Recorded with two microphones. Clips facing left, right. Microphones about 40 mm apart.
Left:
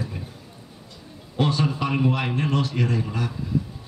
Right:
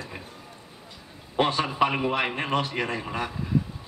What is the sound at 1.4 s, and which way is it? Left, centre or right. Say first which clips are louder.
A man's voice: right 1 dB; right.